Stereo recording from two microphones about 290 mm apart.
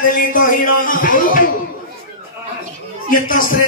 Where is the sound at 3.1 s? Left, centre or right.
Left.